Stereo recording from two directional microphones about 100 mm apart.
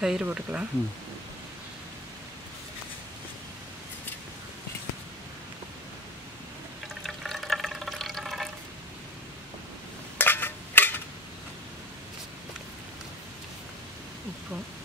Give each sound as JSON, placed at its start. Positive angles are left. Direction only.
{"t": 0.0, "sound": "speech", "side_deg": -10}
{"t": 7.0, "sound": "water", "side_deg": 0}
{"t": 10.1, "sound": "a sound", "side_deg": 20}